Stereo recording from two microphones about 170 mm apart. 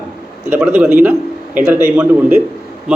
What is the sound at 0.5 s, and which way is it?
A man's voice, 5° right (ahead or behind).